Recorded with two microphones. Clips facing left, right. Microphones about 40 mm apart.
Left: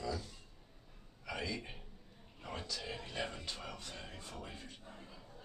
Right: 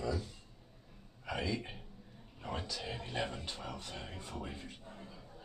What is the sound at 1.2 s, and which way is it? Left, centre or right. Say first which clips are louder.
Speech: right 4 dB; right.